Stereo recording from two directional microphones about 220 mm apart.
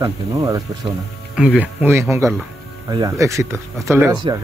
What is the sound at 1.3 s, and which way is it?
Speech, 5° right (ahead or behind).